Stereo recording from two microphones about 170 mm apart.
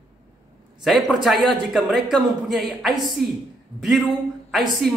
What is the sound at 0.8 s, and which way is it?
A woman's voice, centre (ahead or behind).